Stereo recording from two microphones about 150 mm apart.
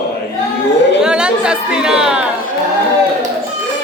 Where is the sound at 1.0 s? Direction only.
5° right (ahead or behind).